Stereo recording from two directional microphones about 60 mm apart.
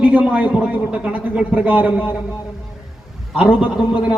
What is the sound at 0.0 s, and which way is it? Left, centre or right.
A man's voice, right.